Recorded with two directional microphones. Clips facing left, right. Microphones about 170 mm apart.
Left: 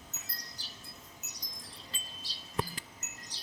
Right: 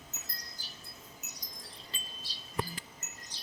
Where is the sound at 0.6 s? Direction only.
80° left.